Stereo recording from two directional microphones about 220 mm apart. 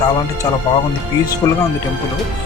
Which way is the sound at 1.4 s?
15° left (ahead or behind).